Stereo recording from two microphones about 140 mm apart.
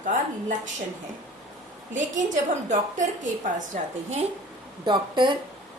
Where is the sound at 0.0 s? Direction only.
65° right (ahead or behind).